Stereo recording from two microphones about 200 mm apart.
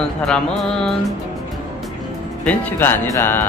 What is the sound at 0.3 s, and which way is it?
Music, centre (ahead or behind).